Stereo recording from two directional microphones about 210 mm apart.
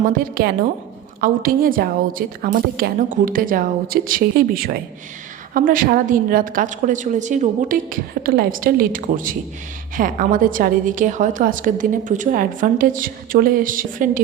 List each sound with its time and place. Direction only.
0.0 s a woman's voice: 40° right (ahead or behind)